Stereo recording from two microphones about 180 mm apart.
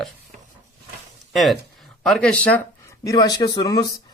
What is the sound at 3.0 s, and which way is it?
Speech, 20° left (ahead or behind).